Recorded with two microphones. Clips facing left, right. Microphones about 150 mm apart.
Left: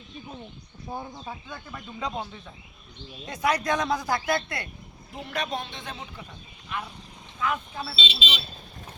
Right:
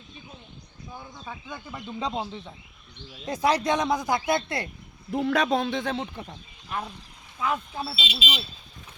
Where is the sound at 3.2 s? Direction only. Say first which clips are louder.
Right 2 dB; 35° right (ahead or behind).